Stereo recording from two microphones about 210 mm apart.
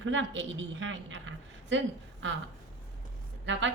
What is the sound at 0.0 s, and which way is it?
A woman's voice, 65° right (ahead or behind).